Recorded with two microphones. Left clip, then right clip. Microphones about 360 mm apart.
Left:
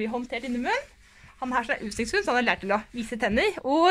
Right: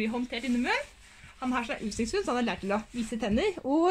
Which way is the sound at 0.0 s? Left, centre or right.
Centre.